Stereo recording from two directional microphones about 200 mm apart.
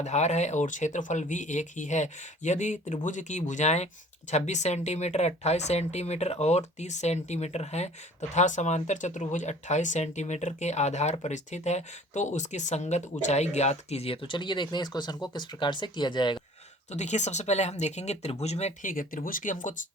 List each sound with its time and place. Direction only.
0.0 s speech: 35° left (ahead or behind)
16.9 s speech: 35° left (ahead or behind)